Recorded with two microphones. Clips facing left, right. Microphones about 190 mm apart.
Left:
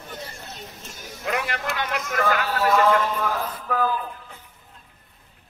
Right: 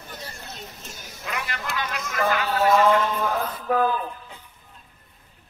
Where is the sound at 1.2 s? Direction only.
60° left (ahead or behind).